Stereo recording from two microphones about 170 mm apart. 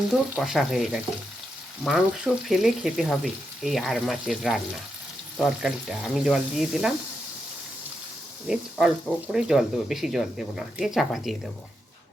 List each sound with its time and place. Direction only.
0.3 s speech: 5° right (ahead or behind)
8.4 s speech: 5° right (ahead or behind)